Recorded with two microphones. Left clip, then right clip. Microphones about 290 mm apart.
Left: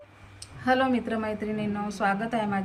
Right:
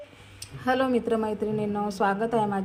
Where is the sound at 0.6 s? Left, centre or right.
Right.